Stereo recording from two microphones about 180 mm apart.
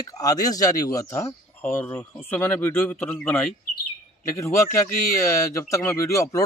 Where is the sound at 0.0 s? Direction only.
20° left (ahead or behind).